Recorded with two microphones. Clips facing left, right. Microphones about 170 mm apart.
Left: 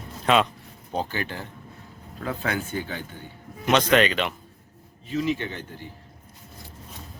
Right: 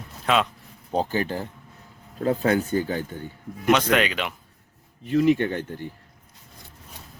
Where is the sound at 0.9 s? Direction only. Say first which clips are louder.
Right 5 dB; 35° right (ahead or behind).